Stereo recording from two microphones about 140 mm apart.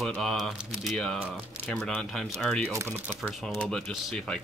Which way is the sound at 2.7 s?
20° right (ahead or behind).